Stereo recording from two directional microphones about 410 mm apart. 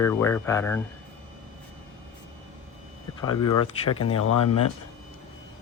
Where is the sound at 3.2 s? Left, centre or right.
Centre.